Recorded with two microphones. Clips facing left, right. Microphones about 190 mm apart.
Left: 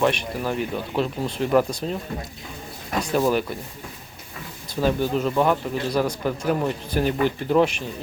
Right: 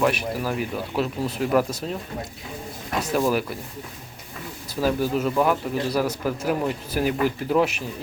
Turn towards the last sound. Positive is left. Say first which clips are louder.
# left 2 dB
turn(degrees=-5)  # may be behind; listen again after turning